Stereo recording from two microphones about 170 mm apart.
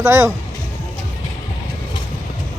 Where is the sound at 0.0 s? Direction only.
15° right (ahead or behind).